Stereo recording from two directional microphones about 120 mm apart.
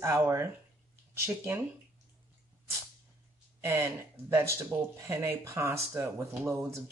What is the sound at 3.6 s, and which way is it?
Speech, 20° right (ahead or behind).